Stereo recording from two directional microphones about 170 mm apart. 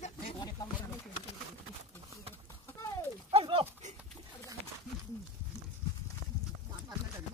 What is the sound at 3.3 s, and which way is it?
Dog, 35° right (ahead or behind).